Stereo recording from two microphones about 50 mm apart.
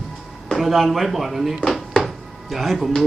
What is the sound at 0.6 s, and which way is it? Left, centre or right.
Speech, centre.